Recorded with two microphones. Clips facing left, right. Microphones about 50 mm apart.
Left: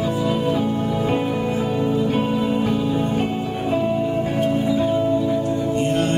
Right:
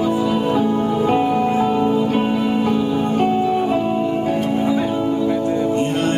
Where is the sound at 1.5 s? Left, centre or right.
Right.